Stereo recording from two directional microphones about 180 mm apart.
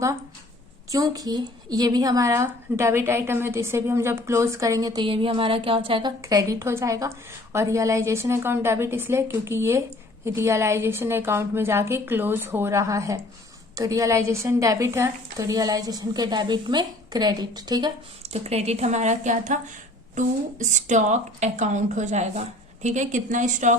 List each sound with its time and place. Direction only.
0.9 s a woman's voice: 20° right (ahead or behind)
18.3 s a woman's voice: 35° right (ahead or behind)